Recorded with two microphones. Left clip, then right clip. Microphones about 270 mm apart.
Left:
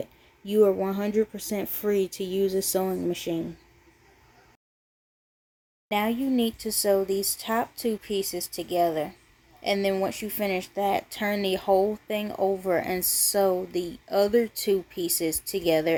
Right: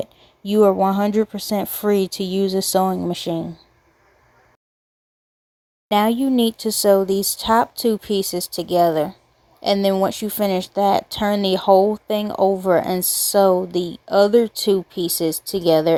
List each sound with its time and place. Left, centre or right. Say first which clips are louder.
0.0 s speech: right 8 dB; right
5.9 s speech: right 9 dB; right